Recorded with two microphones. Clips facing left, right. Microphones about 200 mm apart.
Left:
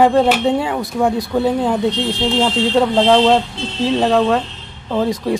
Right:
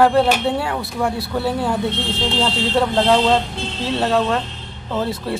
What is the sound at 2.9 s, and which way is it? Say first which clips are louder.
Speech: left 3 dB; 15° left (ahead or behind).